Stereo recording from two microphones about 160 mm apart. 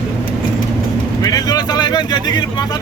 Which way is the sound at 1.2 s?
25° left (ahead or behind).